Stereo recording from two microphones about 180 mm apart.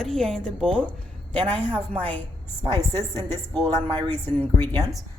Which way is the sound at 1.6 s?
30° right (ahead or behind).